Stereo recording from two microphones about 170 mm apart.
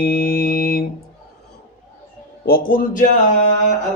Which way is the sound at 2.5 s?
60° left (ahead or behind).